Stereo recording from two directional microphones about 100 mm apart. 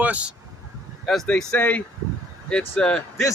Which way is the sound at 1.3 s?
15° left (ahead or behind).